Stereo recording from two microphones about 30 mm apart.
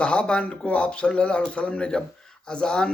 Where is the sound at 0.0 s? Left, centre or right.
Left.